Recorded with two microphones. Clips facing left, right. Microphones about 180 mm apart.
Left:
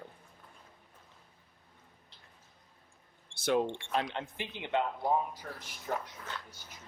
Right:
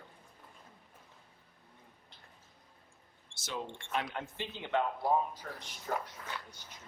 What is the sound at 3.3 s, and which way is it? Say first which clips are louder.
Speech: left 12 dB; 60° left (ahead or behind).